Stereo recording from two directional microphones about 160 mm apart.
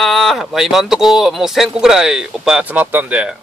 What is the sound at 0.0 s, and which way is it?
Speech, centre (ahead or behind).